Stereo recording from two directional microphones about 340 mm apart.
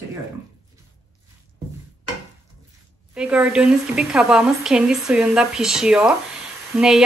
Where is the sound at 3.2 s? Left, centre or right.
Centre.